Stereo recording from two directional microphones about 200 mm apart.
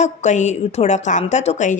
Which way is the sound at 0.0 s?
35° left (ahead or behind).